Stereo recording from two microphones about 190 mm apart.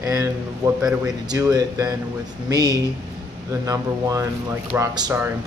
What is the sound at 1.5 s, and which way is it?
Speech, 20° right (ahead or behind).